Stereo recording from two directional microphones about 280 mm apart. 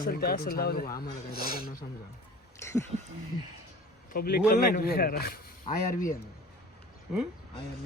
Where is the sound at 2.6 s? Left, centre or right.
Centre.